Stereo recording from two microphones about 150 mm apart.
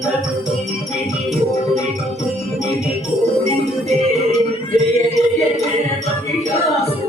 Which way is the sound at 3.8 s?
50° right (ahead or behind).